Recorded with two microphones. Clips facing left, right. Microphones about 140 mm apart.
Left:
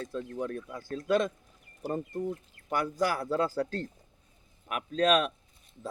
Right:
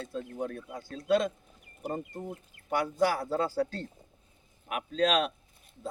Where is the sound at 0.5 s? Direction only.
45° left (ahead or behind).